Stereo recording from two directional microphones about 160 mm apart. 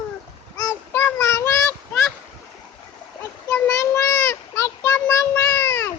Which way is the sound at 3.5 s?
20° left (ahead or behind).